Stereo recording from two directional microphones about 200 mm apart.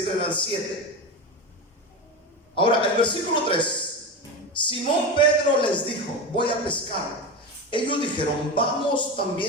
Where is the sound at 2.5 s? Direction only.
25° left (ahead or behind).